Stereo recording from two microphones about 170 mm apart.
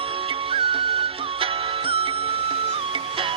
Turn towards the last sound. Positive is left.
turn(degrees=-30)  # may be behind; listen again after turning